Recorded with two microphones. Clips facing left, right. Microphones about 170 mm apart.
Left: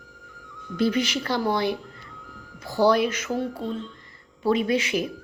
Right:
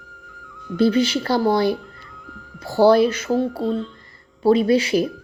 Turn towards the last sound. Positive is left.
turn(degrees=-35)  # may be behind; listen again after turning